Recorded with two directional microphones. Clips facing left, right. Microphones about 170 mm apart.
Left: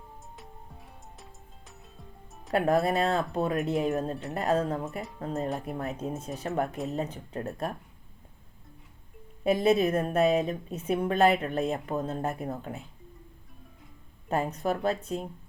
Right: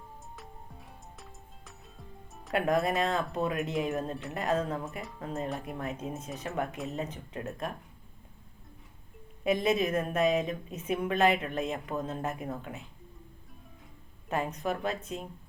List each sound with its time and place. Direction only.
1.2 s music: centre (ahead or behind)
2.5 s a woman's voice: 35° left (ahead or behind)
4.1 s speech: centre (ahead or behind)
4.4 s a woman's voice: 35° left (ahead or behind)
5.5 s speech: centre (ahead or behind)
5.8 s a woman's voice: 35° left (ahead or behind)
9.4 s a woman's voice: 35° left (ahead or behind)
14.5 s a woman's voice: 35° left (ahead or behind)